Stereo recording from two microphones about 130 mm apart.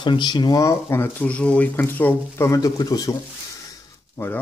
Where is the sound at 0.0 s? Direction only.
35° left (ahead or behind).